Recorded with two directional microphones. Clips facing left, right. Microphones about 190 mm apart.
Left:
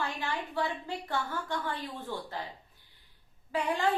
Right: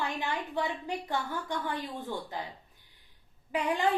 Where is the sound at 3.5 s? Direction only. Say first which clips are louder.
Right 1 dB; 15° right (ahead or behind).